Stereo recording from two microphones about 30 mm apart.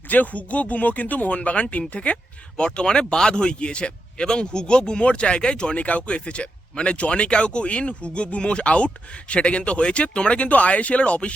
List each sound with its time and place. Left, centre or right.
0.1 s speech: left
1.4 s speech: left
2.7 s speech: left
5.7 s speech: left
6.0 s speech: left